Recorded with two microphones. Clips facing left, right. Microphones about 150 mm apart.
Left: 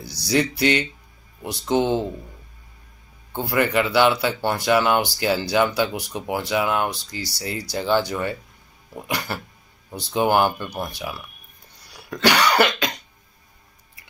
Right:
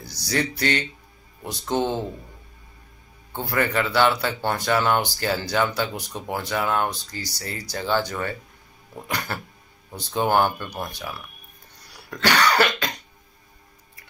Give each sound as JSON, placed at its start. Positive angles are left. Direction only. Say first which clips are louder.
{"t": 0.0, "sound": "speech", "louder": "left 4 dB", "side_deg": 10}
{"t": 3.3, "sound": "speech", "louder": "left 3 dB", "side_deg": 10}
{"t": 6.9, "sound": "speech", "louder": "left 2 dB", "side_deg": 85}
{"t": 7.3, "sound": "speech", "louder": "left 5 dB", "side_deg": 10}
{"t": 12.1, "sound": "cough", "louder": "left 2 dB", "side_deg": 10}